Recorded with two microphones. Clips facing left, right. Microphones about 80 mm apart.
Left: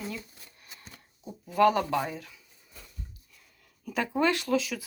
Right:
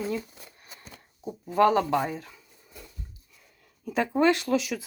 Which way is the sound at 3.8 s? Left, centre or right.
Centre.